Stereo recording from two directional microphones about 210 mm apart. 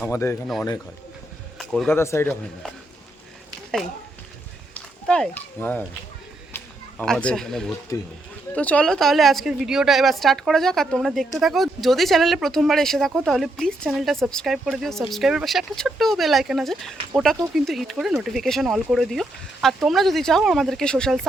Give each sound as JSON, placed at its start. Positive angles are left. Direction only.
{"t": 0.0, "sound": "a man's voice", "side_deg": 10}
{"t": 1.5, "sound": "speech", "side_deg": 0}
{"t": 4.7, "sound": "a sound", "side_deg": 5}
{"t": 7.0, "sound": "speech", "side_deg": 5}
{"t": 7.9, "sound": "a man's voice", "side_deg": 15}